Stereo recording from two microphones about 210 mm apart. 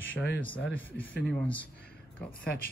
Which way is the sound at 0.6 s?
60° left (ahead or behind).